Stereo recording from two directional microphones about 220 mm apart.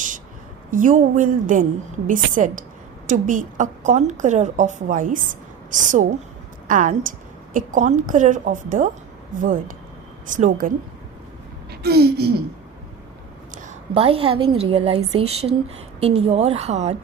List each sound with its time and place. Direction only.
0.7 s a woman's voice: 35° right (ahead or behind)
11.7 s a woman's voice: 45° right (ahead or behind)
13.5 s a woman's voice: 35° right (ahead or behind)